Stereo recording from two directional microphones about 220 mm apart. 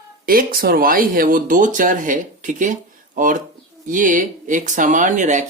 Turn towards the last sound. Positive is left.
turn(degrees=-35)  # may be behind; listen again after turning